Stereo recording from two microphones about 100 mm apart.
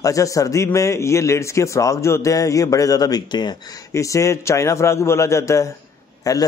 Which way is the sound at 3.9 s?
30° left (ahead or behind).